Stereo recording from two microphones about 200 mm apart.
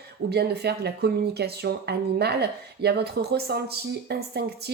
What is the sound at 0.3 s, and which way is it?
A woman's voice, 55° right (ahead or behind).